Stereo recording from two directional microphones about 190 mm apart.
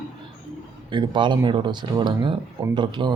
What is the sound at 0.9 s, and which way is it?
Speech, 25° right (ahead or behind).